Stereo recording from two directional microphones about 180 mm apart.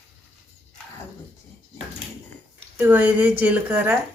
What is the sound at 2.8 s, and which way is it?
A woman's voice, 10° right (ahead or behind).